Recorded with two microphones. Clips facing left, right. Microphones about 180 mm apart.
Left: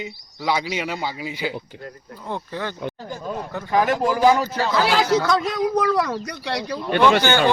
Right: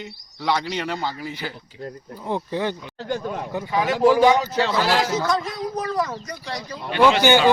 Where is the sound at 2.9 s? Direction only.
75° right (ahead or behind).